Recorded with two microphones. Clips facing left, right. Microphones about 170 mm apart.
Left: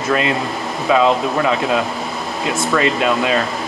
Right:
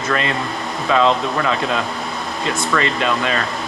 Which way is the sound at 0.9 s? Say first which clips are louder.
Left 2 dB; 10° left (ahead or behind).